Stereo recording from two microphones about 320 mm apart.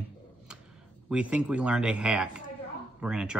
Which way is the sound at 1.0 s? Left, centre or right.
Centre.